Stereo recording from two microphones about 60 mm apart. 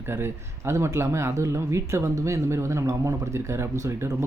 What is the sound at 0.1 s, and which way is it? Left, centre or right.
Speech, right.